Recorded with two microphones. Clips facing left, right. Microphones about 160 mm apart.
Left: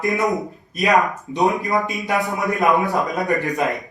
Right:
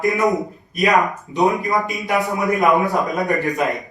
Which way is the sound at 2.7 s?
Centre (ahead or behind).